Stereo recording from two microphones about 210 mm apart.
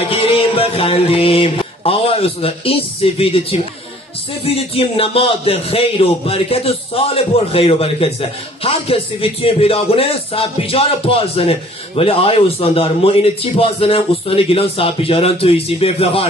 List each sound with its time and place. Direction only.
0.1 s music: 25° left (ahead or behind)
4.5 s a man's voice: 30° left (ahead or behind)